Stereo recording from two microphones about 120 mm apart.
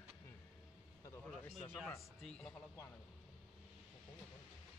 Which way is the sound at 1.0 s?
25° left (ahead or behind).